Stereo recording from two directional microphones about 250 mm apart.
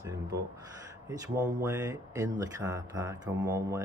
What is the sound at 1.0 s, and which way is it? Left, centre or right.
Speech, centre.